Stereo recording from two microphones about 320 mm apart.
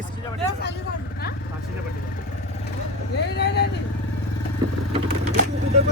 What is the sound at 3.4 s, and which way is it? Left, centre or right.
Speech, left.